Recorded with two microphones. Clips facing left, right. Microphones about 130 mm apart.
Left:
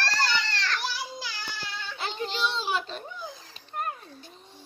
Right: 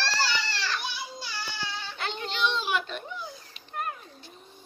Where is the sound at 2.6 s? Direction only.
35° left (ahead or behind).